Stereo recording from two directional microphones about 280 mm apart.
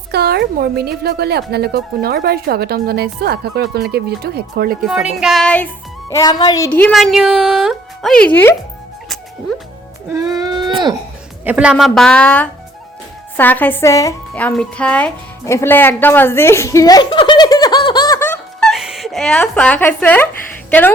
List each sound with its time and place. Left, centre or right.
0.1 s speech: right
4.8 s speech: centre
10.2 s a sound: centre
11.4 s a woman's voice: centre